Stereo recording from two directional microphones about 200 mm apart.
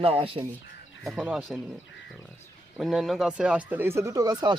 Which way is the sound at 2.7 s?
Centre (ahead or behind).